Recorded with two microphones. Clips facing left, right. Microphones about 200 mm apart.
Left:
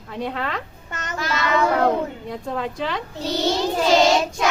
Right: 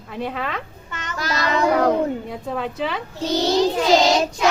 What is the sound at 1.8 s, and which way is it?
A woman's voice, centre (ahead or behind).